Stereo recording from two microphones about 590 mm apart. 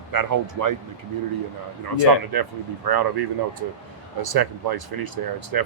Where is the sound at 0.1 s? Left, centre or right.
Right.